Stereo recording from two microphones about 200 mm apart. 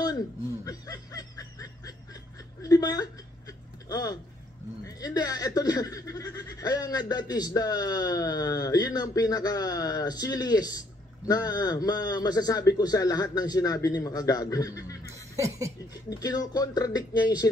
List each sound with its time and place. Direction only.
0.7 s speech: 15° left (ahead or behind)
15.3 s chuckle: 15° right (ahead or behind)
16.1 s speech: 15° left (ahead or behind)